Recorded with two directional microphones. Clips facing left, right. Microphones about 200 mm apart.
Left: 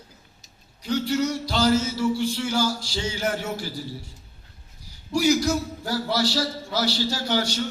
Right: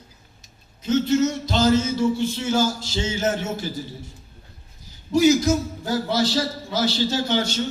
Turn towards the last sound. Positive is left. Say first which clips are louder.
# right 3 dB
turn(degrees=-25)  # may be behind; listen again after turning